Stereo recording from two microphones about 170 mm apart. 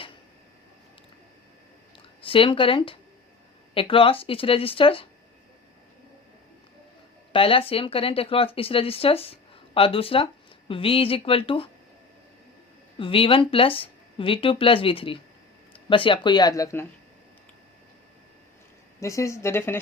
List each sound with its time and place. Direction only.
2.2 s speech: 30° left (ahead or behind)
7.3 s speech: 35° left (ahead or behind)
13.0 s speech: 30° left (ahead or behind)
18.9 s speech: 15° left (ahead or behind)